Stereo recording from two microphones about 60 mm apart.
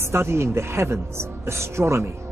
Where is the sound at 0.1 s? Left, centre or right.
Right.